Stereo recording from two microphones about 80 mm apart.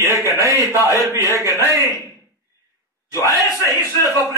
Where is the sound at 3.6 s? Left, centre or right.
Left.